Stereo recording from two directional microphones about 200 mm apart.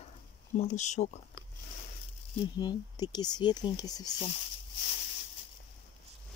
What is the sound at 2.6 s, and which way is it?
Speech, 20° left (ahead or behind).